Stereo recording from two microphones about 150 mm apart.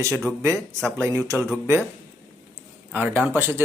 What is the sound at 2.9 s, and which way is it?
Speech, 10° right (ahead or behind).